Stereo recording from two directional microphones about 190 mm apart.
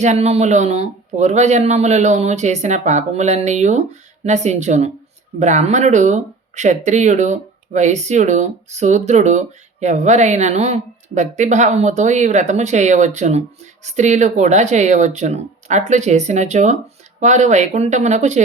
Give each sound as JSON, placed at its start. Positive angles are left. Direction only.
{"t": 0.0, "sound": "speech", "side_deg": -35}